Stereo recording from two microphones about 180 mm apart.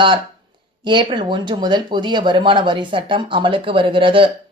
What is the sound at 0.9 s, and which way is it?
Speech, 25° right (ahead or behind).